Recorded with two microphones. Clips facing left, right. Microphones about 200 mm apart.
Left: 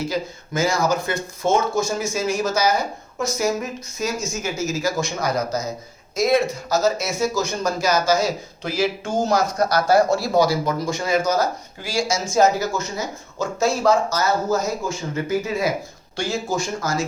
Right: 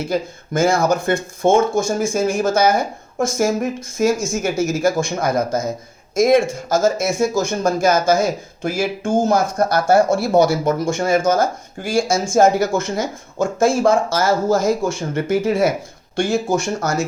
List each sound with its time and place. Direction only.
0.1 s speech: 50° right (ahead or behind)
14.3 s speech: 90° right
15.1 s speech: 75° right (ahead or behind)
16.1 s speech: 55° right (ahead or behind)